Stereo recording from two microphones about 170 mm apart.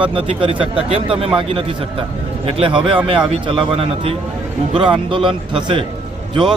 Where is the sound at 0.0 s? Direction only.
30° right (ahead or behind).